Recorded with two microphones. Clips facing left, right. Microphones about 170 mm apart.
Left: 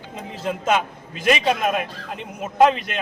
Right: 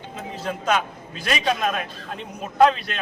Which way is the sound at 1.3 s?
10° left (ahead or behind).